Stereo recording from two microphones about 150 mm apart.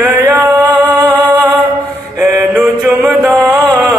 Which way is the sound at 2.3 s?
10° right (ahead or behind).